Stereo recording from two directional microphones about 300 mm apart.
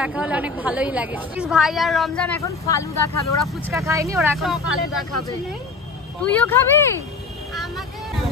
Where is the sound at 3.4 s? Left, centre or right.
Centre.